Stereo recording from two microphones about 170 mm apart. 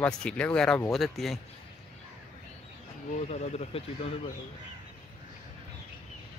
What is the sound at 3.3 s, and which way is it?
Speech, 40° left (ahead or behind).